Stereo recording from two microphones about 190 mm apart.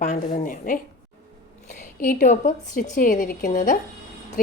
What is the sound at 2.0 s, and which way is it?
A woman's voice, 45° left (ahead or behind).